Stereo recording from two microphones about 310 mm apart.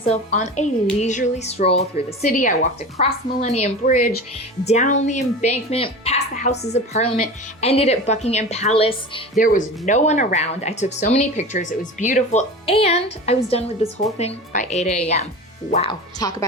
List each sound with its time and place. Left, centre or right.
0.0 s speech: left